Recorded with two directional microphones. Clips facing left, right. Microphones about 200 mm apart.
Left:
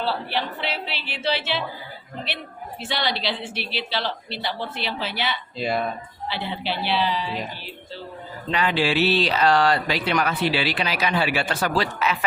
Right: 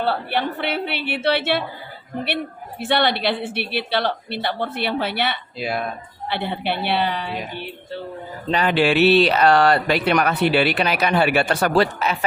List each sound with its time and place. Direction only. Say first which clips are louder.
0.0 s speech: right 4 dB; 55° right (ahead or behind)
5.5 s speech: left 2 dB; 5° right (ahead or behind)
6.2 s speech: right 4 dB; 55° right (ahead or behind)
8.4 s speech: right 3 dB; 35° right (ahead or behind)
8.7 s speech: right 7 dB; 60° right (ahead or behind)